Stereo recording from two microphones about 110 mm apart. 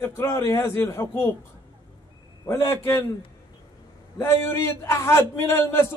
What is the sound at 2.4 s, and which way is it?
Speech, 25° left (ahead or behind).